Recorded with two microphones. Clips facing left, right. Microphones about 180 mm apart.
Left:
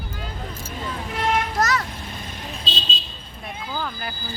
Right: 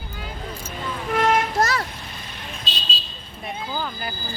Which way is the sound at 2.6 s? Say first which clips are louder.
Left 1 dB; 25° left (ahead or behind).